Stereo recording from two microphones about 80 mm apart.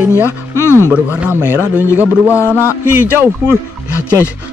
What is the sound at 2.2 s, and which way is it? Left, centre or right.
Speech, left.